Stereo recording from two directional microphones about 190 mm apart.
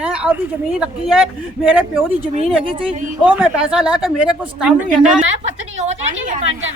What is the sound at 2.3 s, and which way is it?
Speech, 30° right (ahead or behind).